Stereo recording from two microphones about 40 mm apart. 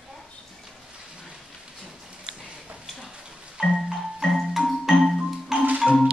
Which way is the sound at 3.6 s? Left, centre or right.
Centre.